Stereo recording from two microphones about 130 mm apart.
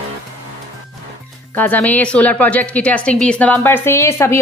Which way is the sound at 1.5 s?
15° left (ahead or behind).